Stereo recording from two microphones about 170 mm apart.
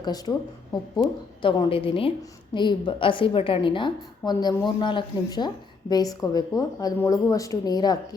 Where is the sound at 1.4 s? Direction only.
30° left (ahead or behind).